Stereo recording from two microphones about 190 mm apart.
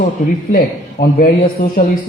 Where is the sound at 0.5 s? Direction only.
55° left (ahead or behind).